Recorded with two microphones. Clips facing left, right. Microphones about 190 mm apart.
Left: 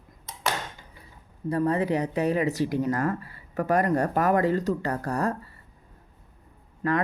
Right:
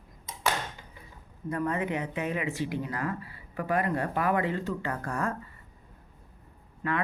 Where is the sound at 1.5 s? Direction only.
35° left (ahead or behind).